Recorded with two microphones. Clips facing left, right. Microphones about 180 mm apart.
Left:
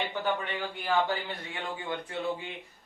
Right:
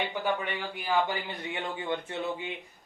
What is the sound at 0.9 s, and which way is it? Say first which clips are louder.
Speech: even; 15° right (ahead or behind).